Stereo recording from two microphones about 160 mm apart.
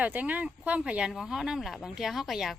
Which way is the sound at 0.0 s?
10° right (ahead or behind).